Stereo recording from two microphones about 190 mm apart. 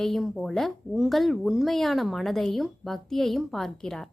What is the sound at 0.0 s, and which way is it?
A woman's voice, centre (ahead or behind).